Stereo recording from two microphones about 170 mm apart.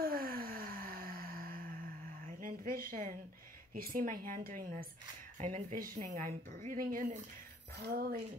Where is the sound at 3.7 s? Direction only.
55° right (ahead or behind).